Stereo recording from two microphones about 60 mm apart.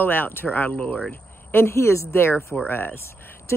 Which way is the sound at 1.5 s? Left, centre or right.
Left.